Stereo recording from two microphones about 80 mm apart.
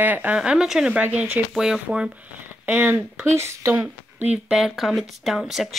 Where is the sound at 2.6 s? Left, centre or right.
Right.